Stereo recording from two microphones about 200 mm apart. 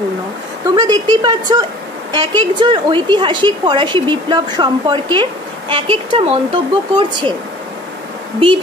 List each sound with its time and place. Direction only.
0.7 s a woman's voice: 20° right (ahead or behind)